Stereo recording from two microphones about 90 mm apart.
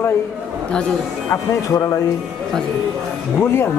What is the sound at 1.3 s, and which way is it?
Speech, 40° left (ahead or behind).